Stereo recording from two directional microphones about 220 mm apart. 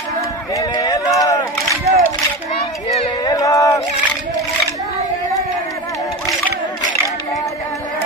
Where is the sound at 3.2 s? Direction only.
15° left (ahead or behind).